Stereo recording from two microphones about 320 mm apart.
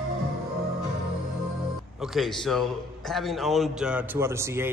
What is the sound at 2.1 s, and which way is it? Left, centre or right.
A man's voice, centre.